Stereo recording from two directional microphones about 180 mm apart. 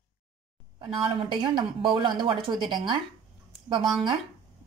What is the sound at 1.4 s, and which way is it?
Speech, 25° right (ahead or behind).